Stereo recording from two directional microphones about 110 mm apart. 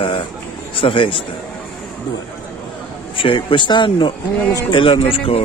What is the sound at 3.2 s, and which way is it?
A man's voice, 50° left (ahead or behind).